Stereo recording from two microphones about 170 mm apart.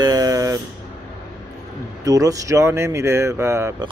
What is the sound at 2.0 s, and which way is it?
Speech, 20° right (ahead or behind).